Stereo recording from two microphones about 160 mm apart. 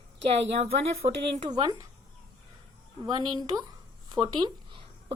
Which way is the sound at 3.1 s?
25° right (ahead or behind).